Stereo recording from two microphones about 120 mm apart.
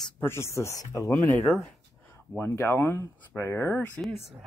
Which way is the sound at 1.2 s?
15° left (ahead or behind).